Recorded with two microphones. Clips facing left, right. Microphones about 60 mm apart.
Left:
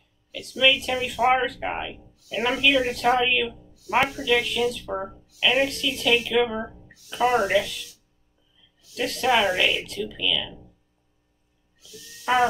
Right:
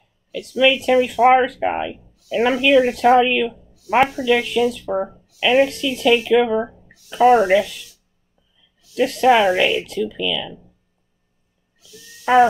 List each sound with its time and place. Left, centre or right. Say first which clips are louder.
0.3 s speech: right 5 dB; right
2.2 s speech: right 7 dB; right
2.6 s speech: right 7 dB; right
8.9 s speech: right 8 dB; right